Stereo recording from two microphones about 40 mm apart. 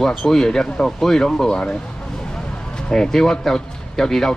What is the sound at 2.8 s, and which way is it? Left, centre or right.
Speech, centre.